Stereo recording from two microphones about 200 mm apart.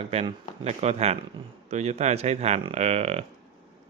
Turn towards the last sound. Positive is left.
turn(degrees=-30)  # may be behind; listen again after turning